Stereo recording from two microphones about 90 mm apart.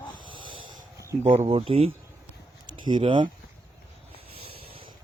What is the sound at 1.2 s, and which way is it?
Speech, 85° right.